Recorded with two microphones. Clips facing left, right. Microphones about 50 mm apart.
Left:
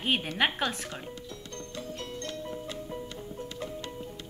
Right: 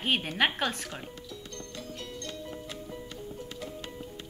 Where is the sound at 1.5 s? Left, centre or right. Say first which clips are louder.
Left 4 dB; left.